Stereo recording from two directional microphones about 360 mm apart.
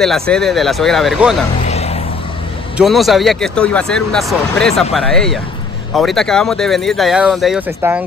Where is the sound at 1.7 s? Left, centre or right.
Centre.